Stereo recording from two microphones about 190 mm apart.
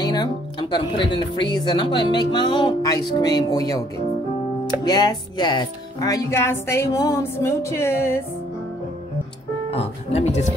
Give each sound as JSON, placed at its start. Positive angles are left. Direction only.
{"t": 0.0, "sound": "speech", "side_deg": 20}
{"t": 4.8, "sound": "speech", "side_deg": 20}
{"t": 9.7, "sound": "speech", "side_deg": 30}